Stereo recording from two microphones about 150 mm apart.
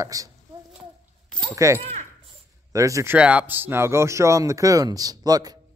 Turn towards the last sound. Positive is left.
turn(degrees=-25)  # may be behind; listen again after turning